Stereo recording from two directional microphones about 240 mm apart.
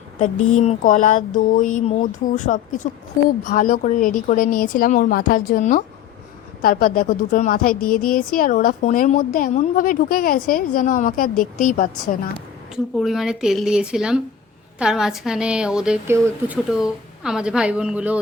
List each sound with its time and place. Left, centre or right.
0.5 s a woman's voice: left
12.7 s a woman's voice: centre